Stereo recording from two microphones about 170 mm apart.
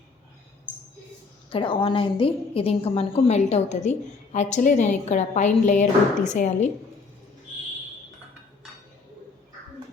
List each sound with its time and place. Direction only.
1.5 s a woman's voice: 30° left (ahead or behind)